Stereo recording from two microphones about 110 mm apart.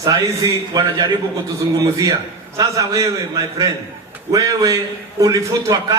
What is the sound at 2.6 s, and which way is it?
Speech, 30° right (ahead or behind).